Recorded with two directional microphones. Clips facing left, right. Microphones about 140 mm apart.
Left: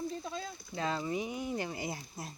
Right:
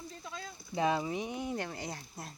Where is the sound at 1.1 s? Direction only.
Centre (ahead or behind).